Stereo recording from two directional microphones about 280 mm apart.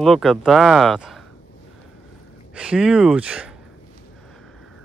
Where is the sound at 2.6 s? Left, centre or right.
Centre.